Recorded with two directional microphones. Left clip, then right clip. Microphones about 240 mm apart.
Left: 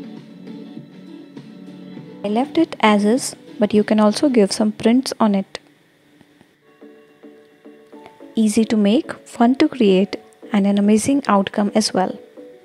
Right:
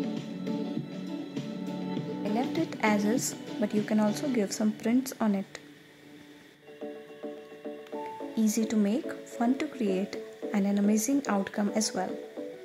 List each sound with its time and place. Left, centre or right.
2.3 s speech: left
8.4 s speech: left